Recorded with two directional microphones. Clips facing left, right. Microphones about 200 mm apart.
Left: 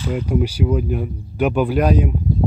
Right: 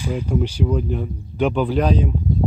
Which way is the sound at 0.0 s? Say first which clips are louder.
Left 2 dB; 10° right (ahead or behind).